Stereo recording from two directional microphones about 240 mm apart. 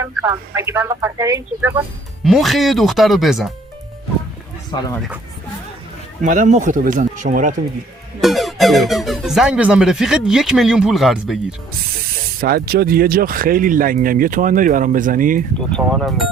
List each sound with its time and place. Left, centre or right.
0.0 s speech: centre
2.2 s speech: centre
4.9 s speech: centre
6.2 s speech: right
8.2 s speech: centre
12.4 s speech: right
15.7 s speech: centre